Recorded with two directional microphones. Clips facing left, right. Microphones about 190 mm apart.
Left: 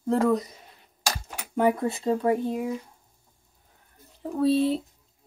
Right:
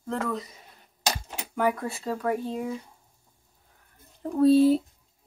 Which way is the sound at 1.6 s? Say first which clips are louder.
Left 4 dB; 25° left (ahead or behind).